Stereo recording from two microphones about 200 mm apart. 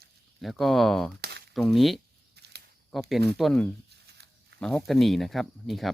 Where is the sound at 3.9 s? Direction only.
55° right (ahead or behind).